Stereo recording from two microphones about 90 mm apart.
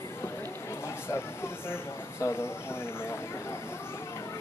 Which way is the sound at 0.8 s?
30° left (ahead or behind).